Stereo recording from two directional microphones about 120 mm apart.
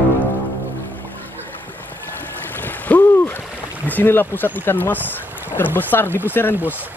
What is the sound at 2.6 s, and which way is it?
Stream, 15° left (ahead or behind).